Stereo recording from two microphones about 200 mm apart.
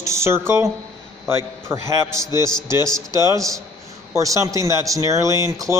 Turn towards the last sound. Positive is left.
turn(degrees=-15)  # may be behind; listen again after turning